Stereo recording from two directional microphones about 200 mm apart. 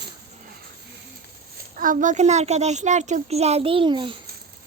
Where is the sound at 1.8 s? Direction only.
40° right (ahead or behind); by 4.2 s 25° right (ahead or behind).